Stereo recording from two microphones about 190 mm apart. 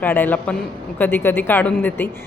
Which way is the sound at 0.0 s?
10° left (ahead or behind).